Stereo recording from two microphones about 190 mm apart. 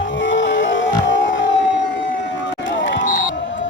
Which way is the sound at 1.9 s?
70° left (ahead or behind).